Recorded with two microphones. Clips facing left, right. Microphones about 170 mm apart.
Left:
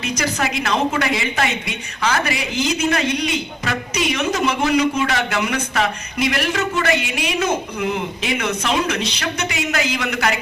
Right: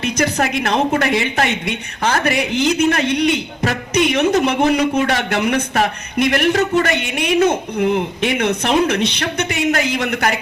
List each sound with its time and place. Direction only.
0.0 s speech: 60° right (ahead or behind)